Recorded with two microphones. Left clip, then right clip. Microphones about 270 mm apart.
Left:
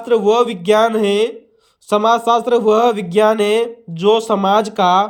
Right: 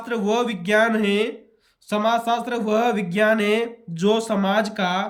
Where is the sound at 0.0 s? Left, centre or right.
Centre.